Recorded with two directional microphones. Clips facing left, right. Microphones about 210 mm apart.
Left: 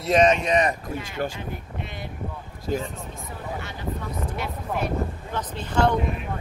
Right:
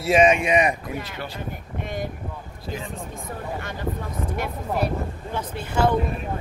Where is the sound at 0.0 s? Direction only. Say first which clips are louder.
Right 1 dB; 10° right (ahead or behind).